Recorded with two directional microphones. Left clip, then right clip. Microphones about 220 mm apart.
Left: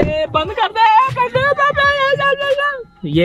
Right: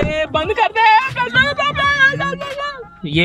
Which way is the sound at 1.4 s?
Centre (ahead or behind).